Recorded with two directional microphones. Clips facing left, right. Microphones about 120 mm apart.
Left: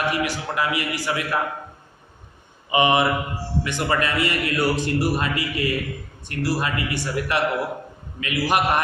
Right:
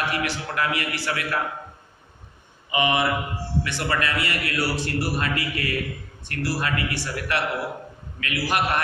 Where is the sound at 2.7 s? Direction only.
25° left (ahead or behind).